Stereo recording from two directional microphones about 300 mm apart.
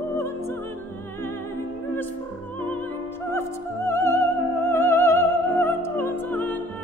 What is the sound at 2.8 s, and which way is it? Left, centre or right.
Music, centre.